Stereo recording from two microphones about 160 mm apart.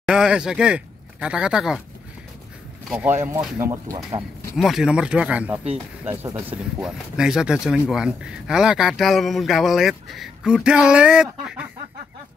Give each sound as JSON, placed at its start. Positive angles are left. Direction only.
{"t": 0.0, "sound": "speech", "side_deg": -5}
{"t": 2.9, "sound": "speech", "side_deg": -10}
{"t": 4.6, "sound": "speech", "side_deg": 0}